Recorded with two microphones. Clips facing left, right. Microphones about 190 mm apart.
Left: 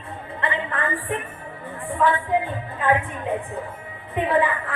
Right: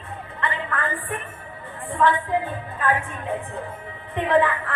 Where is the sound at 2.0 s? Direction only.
10° left (ahead or behind).